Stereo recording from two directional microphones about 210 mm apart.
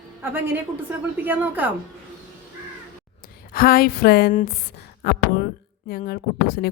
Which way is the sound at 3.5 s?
45° left (ahead or behind).